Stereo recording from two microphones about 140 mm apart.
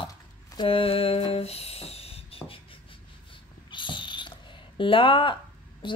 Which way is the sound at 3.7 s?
35° left (ahead or behind).